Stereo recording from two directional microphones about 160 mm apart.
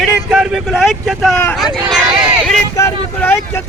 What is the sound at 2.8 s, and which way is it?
Speech, 15° left (ahead or behind).